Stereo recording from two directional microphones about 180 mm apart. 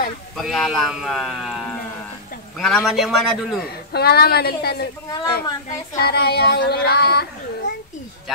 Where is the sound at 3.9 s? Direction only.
65° left (ahead or behind).